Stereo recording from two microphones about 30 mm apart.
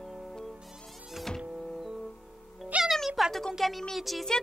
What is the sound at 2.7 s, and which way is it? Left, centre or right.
Speech, right.